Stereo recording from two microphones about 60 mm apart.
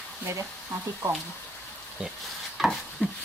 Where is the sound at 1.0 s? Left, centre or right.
Right.